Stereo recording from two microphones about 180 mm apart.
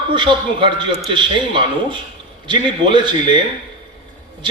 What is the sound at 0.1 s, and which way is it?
A man's voice, 25° right (ahead or behind).